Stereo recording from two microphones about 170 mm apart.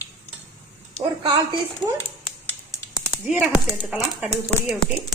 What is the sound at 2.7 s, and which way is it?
Typing, 25° left (ahead or behind).